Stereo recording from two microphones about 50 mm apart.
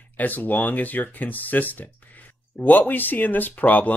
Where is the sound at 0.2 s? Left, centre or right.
Left.